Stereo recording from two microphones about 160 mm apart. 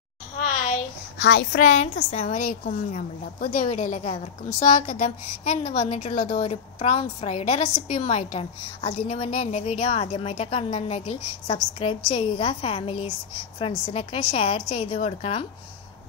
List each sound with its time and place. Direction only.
0.4 s a sound: 50° left (ahead or behind)
1.1 s a woman's voice: 90° left
1.6 s a woman's voice: 45° left (ahead or behind)